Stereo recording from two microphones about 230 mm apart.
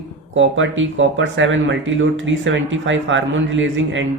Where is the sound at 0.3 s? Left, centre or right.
Right.